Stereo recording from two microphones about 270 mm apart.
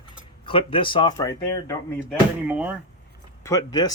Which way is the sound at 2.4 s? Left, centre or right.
Centre.